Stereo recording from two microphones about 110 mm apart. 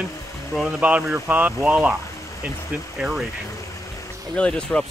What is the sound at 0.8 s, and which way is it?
Speech, 10° right (ahead or behind).